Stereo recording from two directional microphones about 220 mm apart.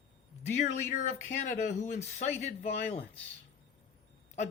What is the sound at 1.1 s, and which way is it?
Speech, 35° left (ahead or behind).